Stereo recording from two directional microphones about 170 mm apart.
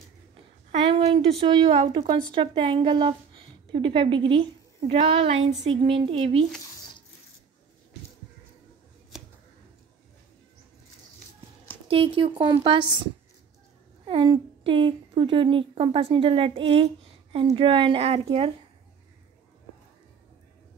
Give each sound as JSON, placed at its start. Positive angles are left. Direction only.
{"t": 0.8, "sound": "speech", "side_deg": -35}
{"t": 11.9, "sound": "a woman's voice", "side_deg": -30}